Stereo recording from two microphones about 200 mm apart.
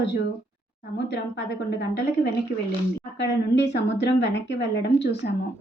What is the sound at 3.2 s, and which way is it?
A woman's voice, 60° left (ahead or behind).